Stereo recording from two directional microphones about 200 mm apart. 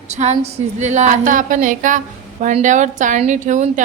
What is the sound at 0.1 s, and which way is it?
A woman's voice, 35° right (ahead or behind).